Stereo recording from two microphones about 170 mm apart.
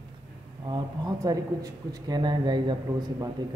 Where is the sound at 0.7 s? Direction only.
25° right (ahead or behind).